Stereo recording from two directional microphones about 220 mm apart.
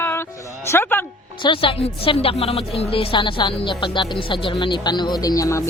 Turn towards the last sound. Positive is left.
turn(degrees=15)  # may be behind; listen again after turning